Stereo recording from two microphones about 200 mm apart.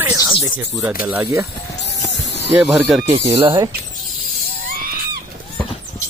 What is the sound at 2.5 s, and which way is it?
Speech, 5° right (ahead or behind).